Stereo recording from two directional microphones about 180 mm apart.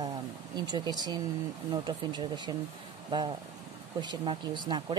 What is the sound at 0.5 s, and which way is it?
Speech, 25° right (ahead or behind).